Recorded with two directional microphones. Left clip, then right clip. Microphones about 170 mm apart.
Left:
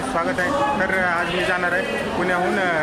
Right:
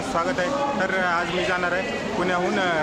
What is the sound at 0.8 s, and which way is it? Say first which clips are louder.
Speech: left 2 dB; 10° left (ahead or behind).